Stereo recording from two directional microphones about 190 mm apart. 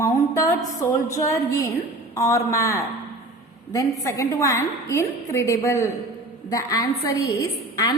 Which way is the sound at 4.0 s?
15° left (ahead or behind).